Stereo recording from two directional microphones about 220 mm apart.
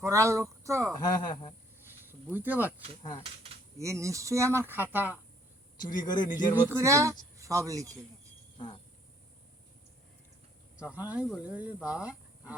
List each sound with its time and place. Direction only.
0.0 s speech: 15° right (ahead or behind)
1.0 s speech: 20° left (ahead or behind)
1.9 s cricket: 10° right (ahead or behind)
3.0 s speech: 15° left (ahead or behind)
3.2 s a sound: 25° right (ahead or behind)
3.8 s speech: 15° right (ahead or behind)
5.8 s speech: 35° left (ahead or behind)
6.6 s speech: 10° right (ahead or behind)
8.5 s insect: 20° left (ahead or behind)
10.8 s speech: 5° right (ahead or behind)